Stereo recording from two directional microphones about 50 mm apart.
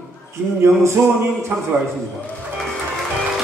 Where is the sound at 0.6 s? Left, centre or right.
Right.